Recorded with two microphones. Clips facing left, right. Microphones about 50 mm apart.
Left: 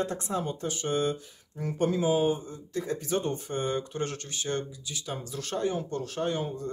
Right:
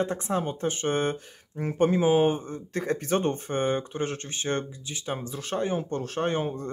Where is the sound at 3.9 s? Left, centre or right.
Right.